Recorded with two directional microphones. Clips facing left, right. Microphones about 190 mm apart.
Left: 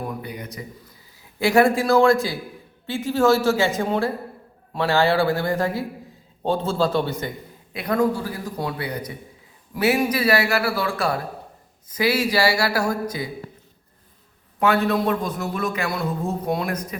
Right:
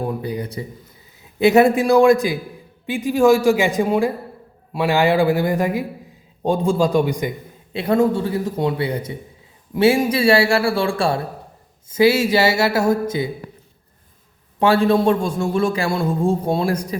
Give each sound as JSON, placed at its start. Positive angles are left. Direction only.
{"t": 0.0, "sound": "speech", "side_deg": -30}
{"t": 1.2, "sound": "a man's voice", "side_deg": -20}
{"t": 7.7, "sound": "a man's voice", "side_deg": -25}
{"t": 14.6, "sound": "a man's voice", "side_deg": -30}